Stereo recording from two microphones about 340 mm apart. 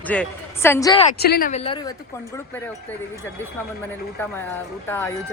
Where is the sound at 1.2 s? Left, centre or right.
Left.